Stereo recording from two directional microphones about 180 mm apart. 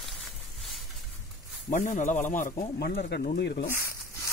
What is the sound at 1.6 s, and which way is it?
Speech, 45° left (ahead or behind).